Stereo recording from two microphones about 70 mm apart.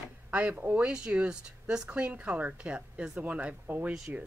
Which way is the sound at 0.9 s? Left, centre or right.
Centre.